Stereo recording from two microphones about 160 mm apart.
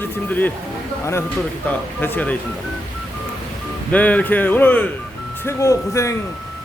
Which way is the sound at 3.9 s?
10° left (ahead or behind).